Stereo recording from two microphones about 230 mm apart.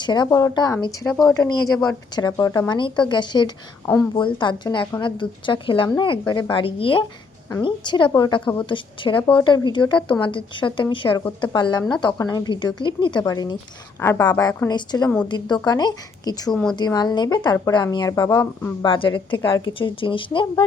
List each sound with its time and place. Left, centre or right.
0.0 s a woman's voice: centre